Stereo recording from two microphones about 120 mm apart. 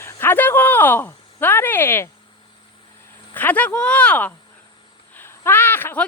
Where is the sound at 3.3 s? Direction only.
15° left (ahead or behind).